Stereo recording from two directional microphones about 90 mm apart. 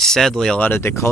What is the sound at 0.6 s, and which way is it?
Speech, 25° left (ahead or behind).